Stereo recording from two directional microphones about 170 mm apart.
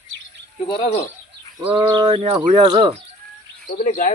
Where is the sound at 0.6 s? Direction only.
30° left (ahead or behind).